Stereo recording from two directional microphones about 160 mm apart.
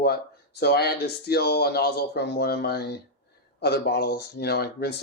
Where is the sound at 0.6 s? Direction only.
85° left.